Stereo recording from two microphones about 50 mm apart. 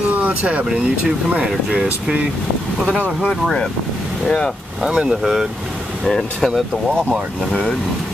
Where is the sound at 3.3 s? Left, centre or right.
Centre.